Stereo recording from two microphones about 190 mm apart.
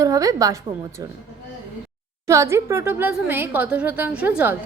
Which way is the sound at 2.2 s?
15° right (ahead or behind).